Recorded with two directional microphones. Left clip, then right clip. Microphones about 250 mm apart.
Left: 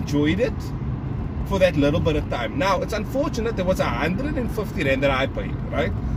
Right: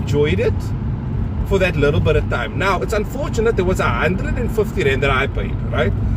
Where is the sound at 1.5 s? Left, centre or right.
Centre.